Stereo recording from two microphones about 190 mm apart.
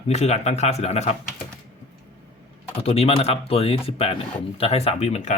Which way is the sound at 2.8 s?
30° left (ahead or behind).